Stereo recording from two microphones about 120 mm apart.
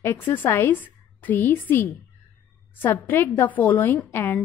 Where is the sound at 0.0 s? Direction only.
15° left (ahead or behind).